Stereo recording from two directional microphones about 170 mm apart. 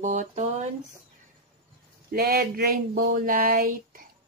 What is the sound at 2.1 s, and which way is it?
Female singing, 65° right (ahead or behind).